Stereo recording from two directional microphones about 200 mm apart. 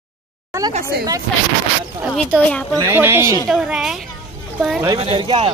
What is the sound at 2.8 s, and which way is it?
A woman's voice, 10° right (ahead or behind).